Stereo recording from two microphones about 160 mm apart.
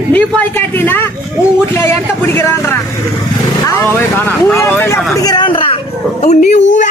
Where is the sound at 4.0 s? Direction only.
15° left (ahead or behind); by 5.8 s 35° left (ahead or behind).